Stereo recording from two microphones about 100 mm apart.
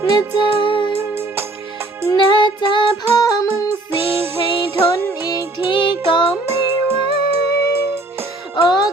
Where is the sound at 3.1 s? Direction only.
35° left (ahead or behind).